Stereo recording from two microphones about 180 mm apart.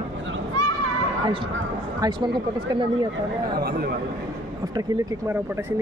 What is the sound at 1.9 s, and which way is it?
Speech, 25° right (ahead or behind).